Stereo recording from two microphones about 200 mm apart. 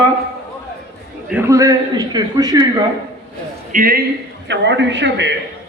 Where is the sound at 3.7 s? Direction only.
45° right (ahead or behind).